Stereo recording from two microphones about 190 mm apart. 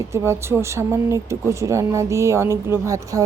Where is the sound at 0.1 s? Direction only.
15° right (ahead or behind).